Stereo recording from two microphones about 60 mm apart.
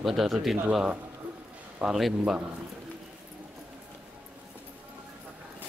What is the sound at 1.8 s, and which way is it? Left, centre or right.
Speech, centre.